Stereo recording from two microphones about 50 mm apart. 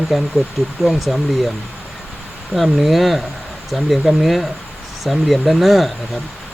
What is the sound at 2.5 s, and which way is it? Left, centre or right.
Speech, centre.